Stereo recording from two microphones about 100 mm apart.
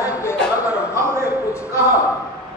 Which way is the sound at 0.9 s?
30° right (ahead or behind).